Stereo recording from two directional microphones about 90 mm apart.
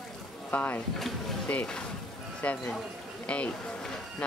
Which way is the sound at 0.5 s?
20° left (ahead or behind).